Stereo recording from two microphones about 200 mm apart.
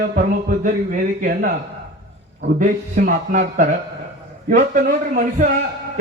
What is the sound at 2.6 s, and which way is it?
A man's voice, 40° right (ahead or behind).